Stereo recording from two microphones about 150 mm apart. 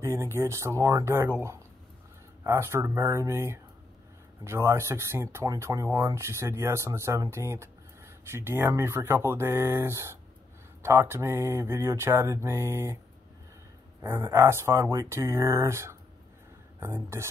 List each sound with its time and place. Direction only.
0.0 s speech: 20° right (ahead or behind)
2.4 s speech: 20° right (ahead or behind)
14.0 s speech: 15° right (ahead or behind)